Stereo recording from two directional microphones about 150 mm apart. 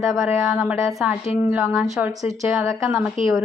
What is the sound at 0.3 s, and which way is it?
A woman's voice, 10° right (ahead or behind).